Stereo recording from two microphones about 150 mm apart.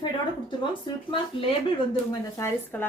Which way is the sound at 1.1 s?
35° left (ahead or behind).